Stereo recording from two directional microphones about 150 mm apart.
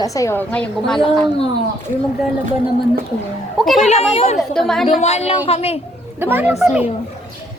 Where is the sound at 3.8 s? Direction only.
45° left (ahead or behind).